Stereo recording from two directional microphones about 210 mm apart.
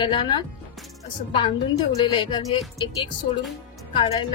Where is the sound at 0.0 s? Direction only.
20° left (ahead or behind).